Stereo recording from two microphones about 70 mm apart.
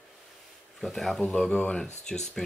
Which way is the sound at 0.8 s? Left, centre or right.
Centre.